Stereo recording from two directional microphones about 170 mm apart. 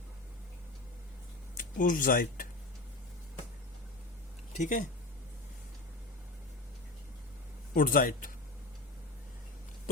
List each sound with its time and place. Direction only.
1.5 s speech: 50° left (ahead or behind)
4.5 s speech: 45° left (ahead or behind)
7.7 s speech: 55° left (ahead or behind)